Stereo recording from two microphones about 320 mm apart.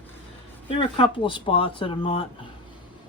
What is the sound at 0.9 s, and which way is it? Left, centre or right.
Speech, centre.